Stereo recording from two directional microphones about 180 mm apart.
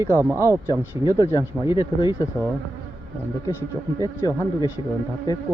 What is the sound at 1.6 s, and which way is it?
Speech, 15° right (ahead or behind).